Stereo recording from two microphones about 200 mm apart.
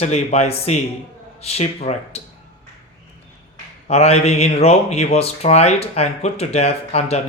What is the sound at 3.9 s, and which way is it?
Speech, 30° left (ahead or behind).